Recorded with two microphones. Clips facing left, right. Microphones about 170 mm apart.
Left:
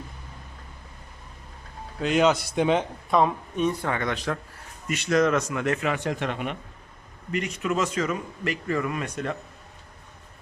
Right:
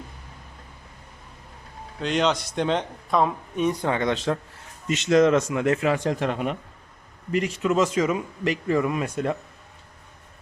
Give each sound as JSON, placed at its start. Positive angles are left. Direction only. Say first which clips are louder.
{"t": 2.0, "sound": "a man's voice", "louder": "left 2 dB", "side_deg": 5}
{"t": 3.6, "sound": "speech", "louder": "right 2 dB", "side_deg": -15}
{"t": 7.9, "sound": "speech", "louder": "right 4 dB", "side_deg": -15}
{"t": 9.0, "sound": "speech", "louder": "right 4 dB", "side_deg": -25}